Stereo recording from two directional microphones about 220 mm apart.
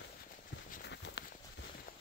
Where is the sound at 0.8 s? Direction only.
50° left (ahead or behind).